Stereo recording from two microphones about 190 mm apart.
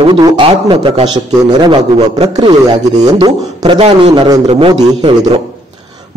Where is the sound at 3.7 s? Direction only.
35° right (ahead or behind).